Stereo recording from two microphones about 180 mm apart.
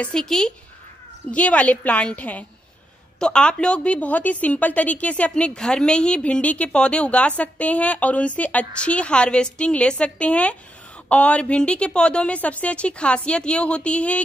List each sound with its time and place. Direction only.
0.0 s a woman's voice: 5° left (ahead or behind)